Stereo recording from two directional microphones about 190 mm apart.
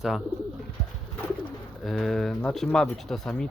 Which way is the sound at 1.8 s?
Centre (ahead or behind).